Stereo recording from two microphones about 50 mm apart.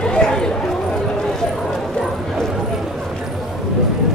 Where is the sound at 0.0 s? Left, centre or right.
Centre.